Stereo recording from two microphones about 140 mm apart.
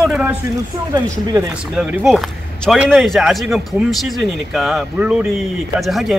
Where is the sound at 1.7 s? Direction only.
Centre (ahead or behind).